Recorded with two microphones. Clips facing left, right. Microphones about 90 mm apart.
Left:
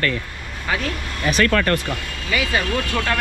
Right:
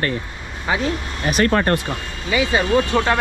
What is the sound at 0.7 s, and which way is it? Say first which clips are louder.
Speech: right 3 dB; 20° right (ahead or behind).